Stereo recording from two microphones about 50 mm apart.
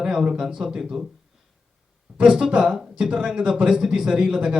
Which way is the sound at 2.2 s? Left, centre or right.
Centre.